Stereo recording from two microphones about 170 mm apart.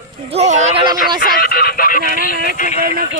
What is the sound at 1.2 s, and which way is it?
Speech, 60° left (ahead or behind).